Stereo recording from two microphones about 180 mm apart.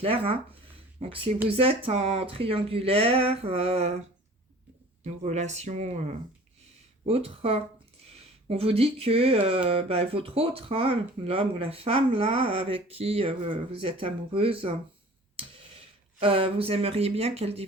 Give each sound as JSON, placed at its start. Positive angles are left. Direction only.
{"t": 0.0, "sound": "speech", "side_deg": -30}
{"t": 5.0, "sound": "speech", "side_deg": -40}
{"t": 16.2, "sound": "speech", "side_deg": -30}